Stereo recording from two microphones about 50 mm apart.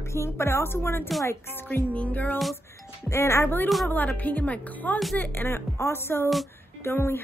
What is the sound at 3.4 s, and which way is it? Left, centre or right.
A woman's voice, left.